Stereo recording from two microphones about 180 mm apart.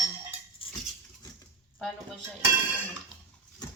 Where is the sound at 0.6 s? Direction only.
30° left (ahead or behind).